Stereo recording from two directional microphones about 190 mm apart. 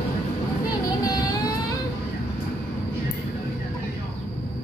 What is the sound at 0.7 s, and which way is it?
Vehicle, 20° left (ahead or behind).